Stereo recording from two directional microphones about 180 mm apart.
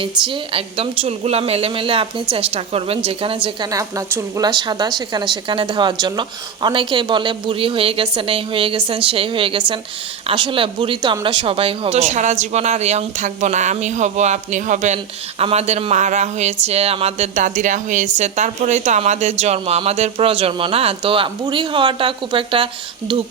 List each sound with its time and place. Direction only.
0.3 s a woman's voice: 30° right (ahead or behind)